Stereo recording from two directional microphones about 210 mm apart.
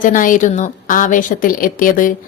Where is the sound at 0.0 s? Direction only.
40° left (ahead or behind).